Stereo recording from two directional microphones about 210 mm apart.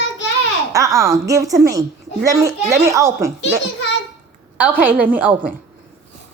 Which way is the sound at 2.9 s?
15° right (ahead or behind).